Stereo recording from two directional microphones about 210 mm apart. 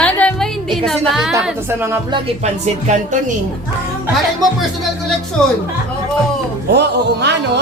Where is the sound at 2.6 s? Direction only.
35° right (ahead or behind).